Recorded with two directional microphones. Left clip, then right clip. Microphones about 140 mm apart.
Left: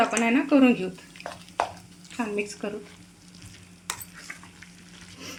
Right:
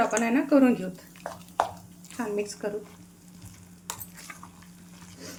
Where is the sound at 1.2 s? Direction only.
20° right (ahead or behind).